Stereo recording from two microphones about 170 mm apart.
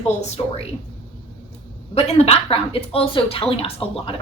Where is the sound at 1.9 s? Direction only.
35° left (ahead or behind).